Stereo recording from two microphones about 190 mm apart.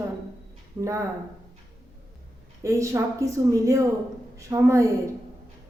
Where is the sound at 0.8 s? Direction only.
15° right (ahead or behind).